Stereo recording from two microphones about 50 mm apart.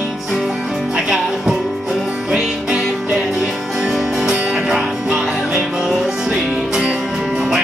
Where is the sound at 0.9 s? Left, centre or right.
Centre.